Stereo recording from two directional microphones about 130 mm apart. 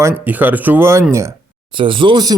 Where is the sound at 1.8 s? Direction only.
40° right (ahead or behind).